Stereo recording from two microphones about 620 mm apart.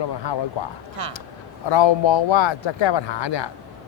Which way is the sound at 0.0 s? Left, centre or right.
Left.